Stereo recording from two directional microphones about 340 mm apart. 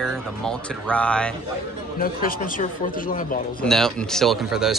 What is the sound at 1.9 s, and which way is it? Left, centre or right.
A man's voice, left.